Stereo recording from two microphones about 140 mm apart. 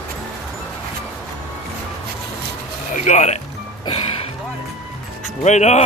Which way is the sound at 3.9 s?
40° left (ahead or behind).